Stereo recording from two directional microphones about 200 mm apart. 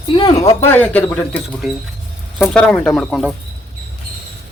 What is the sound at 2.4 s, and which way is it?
Speech, 5° left (ahead or behind).